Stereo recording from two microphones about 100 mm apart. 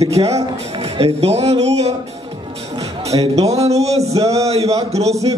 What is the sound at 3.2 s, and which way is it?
Music, 90° right.